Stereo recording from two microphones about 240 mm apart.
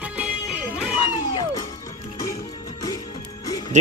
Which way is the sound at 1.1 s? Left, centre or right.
Centre.